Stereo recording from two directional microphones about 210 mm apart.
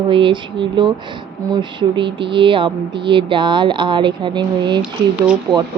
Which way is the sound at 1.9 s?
25° right (ahead or behind).